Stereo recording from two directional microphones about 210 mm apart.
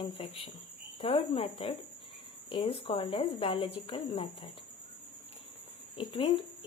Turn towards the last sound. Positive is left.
turn(degrees=25)  # may be behind; listen again after turning